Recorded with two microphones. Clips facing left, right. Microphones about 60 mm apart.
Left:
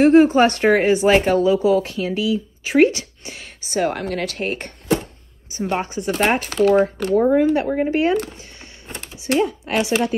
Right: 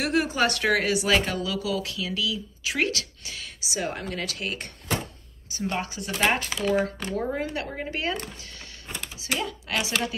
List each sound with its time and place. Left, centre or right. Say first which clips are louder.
0.0 s a woman's voice: left 12 dB; left
5.5 s speech: left 7 dB; left
6.1 s a woman's voice: left 4 dB; left
6.6 s speech: left 12 dB; left
7.2 s a woman's voice: left 14 dB; left
8.4 s a sound: left 3 dB; left
9.4 s a woman's voice: left 10 dB; left